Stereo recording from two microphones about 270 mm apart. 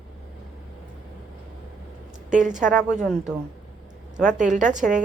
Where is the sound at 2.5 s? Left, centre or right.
Centre.